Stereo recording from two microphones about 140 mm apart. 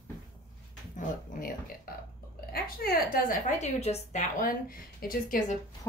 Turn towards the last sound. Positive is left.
turn(degrees=75)  # may be behind; listen again after turning